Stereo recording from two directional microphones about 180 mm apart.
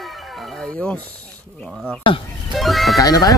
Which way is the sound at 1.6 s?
5° left (ahead or behind).